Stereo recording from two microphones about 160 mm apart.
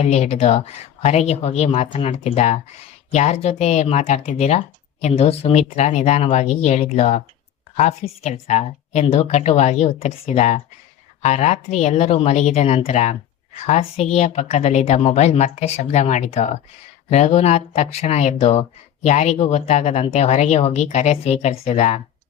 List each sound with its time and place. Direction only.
0.0 s speech: 45° left (ahead or behind)